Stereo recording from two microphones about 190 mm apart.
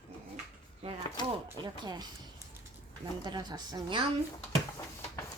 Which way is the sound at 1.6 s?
20° right (ahead or behind).